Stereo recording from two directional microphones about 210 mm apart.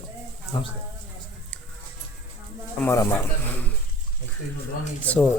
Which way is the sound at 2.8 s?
10° left (ahead or behind).